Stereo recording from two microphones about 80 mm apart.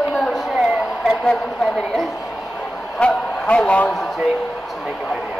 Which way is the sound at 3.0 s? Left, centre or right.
Centre.